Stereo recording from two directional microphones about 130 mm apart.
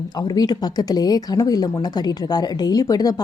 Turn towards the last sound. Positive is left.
turn(degrees=30)  # may be behind; listen again after turning